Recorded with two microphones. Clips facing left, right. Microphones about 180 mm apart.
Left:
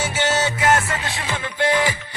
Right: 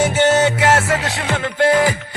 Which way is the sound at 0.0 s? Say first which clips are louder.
Right 8 dB; 55° right (ahead or behind).